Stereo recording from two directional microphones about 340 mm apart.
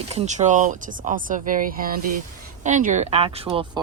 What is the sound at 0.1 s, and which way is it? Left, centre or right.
Speech, right.